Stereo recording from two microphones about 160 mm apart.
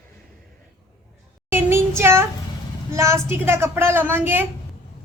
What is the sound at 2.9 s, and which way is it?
A woman's voice, 15° right (ahead or behind).